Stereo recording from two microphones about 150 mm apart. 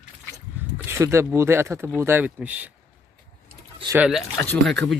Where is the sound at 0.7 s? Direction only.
15° right (ahead or behind).